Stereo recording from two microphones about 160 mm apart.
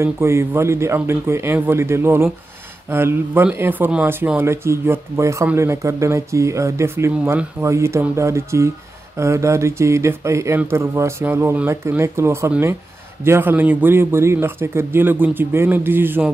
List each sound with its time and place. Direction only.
0.0 s speech: 15° right (ahead or behind)